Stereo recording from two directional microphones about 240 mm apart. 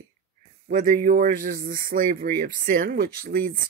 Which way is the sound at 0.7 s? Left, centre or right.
Right.